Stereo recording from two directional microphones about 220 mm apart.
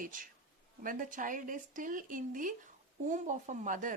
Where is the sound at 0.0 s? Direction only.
40° right (ahead or behind).